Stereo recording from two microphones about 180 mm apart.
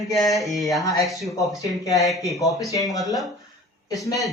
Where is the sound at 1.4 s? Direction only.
20° left (ahead or behind).